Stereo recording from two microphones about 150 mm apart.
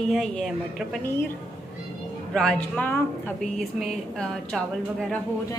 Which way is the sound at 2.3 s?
5° left (ahead or behind).